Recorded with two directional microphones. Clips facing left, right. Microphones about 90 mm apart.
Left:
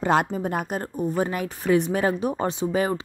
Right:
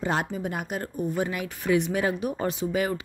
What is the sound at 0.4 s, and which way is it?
Speech, 40° left (ahead or behind).